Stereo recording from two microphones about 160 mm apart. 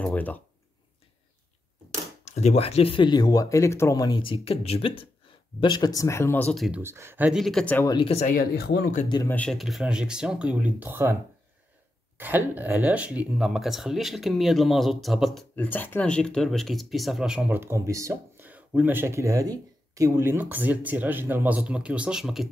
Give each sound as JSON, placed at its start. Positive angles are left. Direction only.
{"t": 0.0, "sound": "speech", "side_deg": 10}
{"t": 2.2, "sound": "speech", "side_deg": 45}
{"t": 5.6, "sound": "speech", "side_deg": 25}
{"t": 6.8, "sound": "speech", "side_deg": -15}
{"t": 7.9, "sound": "speech", "side_deg": 30}
{"t": 8.2, "sound": "speech", "side_deg": 60}
{"t": 9.3, "sound": "speech", "side_deg": 5}
{"t": 12.2, "sound": "speech", "side_deg": -10}
{"t": 15.5, "sound": "speech", "side_deg": 10}